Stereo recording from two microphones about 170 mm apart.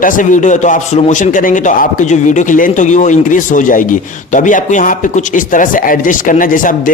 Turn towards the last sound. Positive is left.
turn(degrees=55)  # may be behind; listen again after turning